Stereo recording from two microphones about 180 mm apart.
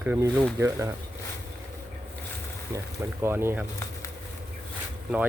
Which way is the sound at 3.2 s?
15° right (ahead or behind).